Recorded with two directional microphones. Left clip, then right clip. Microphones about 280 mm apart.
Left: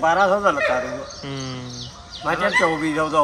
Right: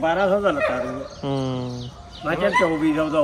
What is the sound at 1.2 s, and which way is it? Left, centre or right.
Speech, centre.